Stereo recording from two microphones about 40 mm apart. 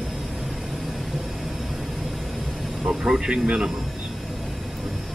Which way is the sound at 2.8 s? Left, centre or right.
Centre.